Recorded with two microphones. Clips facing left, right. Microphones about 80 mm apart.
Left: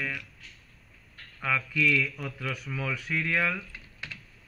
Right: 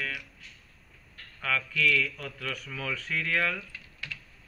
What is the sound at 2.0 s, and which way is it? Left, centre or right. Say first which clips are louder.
Speech: left 1 dB; centre.